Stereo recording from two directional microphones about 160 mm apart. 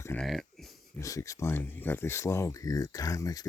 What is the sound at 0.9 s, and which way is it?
Speech, 20° left (ahead or behind).